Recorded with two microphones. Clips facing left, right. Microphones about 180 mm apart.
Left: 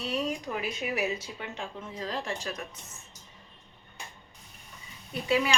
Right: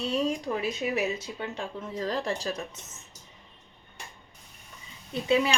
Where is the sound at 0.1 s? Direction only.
30° right (ahead or behind).